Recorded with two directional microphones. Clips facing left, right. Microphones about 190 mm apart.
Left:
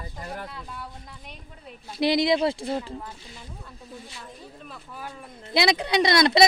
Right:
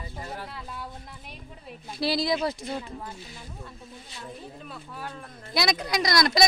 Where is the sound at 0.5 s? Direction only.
Centre (ahead or behind).